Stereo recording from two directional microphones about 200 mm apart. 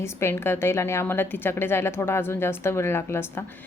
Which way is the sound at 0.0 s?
15° left (ahead or behind).